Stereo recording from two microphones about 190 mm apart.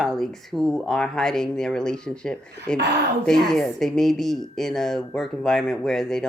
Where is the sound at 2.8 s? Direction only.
60° right (ahead or behind).